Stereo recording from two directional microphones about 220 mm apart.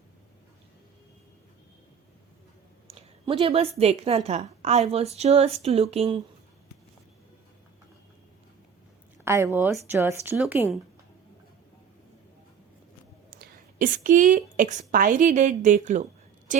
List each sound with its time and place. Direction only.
2.8 s a woman's voice: 25° right (ahead or behind)
9.2 s speech: 10° right (ahead or behind)
13.3 s a woman's voice: 40° right (ahead or behind)